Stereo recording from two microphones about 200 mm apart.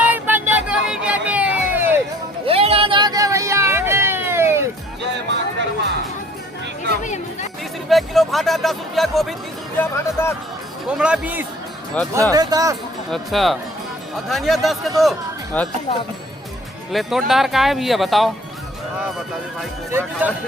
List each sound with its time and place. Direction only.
0.1 s a sound: 10° right (ahead or behind)
2.5 s a sound: 30° right (ahead or behind); by 4.6 s 10° right (ahead or behind)
5.3 s music: 60° right (ahead or behind)
7.0 s chatter: 35° left (ahead or behind)
7.9 s speech: centre (ahead or behind)
9.7 s speech: 10° left (ahead or behind)
10.8 s speech: 5° right (ahead or behind)
12.0 s speech: 5° left (ahead or behind)
12.3 s speech: 20° right (ahead or behind)
13.1 s speech: centre (ahead or behind)
16.9 s speech: centre (ahead or behind)
19.9 s speech: 10° right (ahead or behind)